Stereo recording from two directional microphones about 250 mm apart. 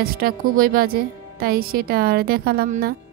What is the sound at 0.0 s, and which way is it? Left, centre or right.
Speech, right.